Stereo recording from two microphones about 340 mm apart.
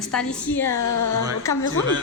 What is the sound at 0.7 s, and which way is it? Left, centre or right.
Speech, left.